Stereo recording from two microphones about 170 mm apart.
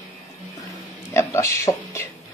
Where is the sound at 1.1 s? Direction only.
15° left (ahead or behind).